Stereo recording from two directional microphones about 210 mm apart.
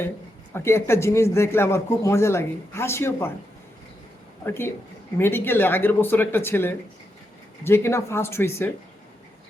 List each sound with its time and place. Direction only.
0.5 s speech: 10° left (ahead or behind)
4.4 s speech: 10° left (ahead or behind)